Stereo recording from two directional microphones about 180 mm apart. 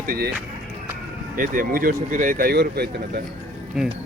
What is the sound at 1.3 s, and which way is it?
Speech, 50° right (ahead or behind).